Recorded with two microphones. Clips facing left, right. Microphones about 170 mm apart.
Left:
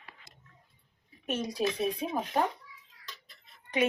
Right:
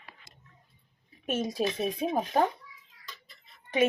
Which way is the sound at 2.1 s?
45° right (ahead or behind).